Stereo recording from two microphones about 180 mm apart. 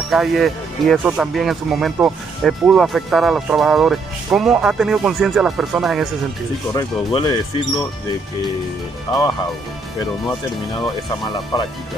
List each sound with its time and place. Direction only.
0.1 s speech: centre (ahead or behind)
6.7 s speech: 25° left (ahead or behind)
9.1 s speech: 25° left (ahead or behind)